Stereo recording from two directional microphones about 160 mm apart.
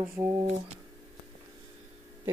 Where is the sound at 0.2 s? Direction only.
15° right (ahead or behind).